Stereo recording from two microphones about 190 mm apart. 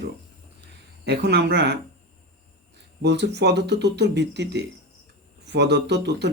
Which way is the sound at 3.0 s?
65° right (ahead or behind).